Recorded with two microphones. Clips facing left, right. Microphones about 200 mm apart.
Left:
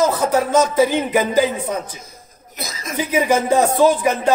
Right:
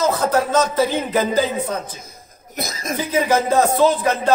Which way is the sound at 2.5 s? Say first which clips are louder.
Right 4 dB; 50° right (ahead or behind).